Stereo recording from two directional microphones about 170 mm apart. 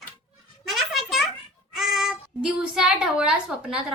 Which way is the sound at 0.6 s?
Centre (ahead or behind).